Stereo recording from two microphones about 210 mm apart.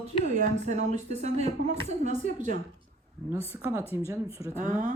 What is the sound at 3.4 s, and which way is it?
Speech, 10° right (ahead or behind).